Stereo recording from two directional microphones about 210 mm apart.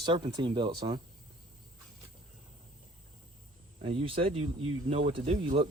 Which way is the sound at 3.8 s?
25° right (ahead or behind).